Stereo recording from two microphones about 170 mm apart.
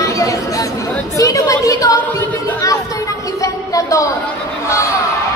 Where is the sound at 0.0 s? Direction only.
20° left (ahead or behind).